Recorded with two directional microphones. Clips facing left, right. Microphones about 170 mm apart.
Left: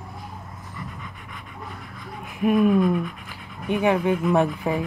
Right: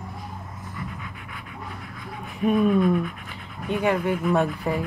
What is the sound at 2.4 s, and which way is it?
Speech, 5° left (ahead or behind).